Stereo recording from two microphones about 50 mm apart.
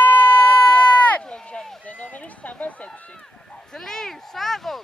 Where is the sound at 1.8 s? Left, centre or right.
Left.